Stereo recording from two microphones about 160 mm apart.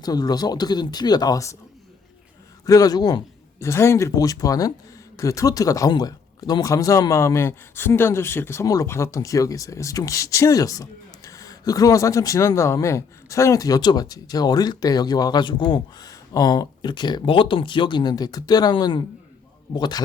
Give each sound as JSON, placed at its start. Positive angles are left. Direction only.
{"t": 0.0, "sound": "speech", "side_deg": 25}
{"t": 2.6, "sound": "speech", "side_deg": 20}